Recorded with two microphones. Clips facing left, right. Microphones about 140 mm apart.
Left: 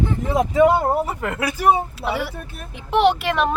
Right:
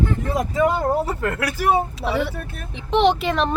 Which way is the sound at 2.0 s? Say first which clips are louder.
Right 2 dB; 5° left (ahead or behind).